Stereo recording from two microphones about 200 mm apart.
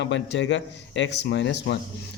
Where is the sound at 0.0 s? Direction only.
65° left (ahead or behind).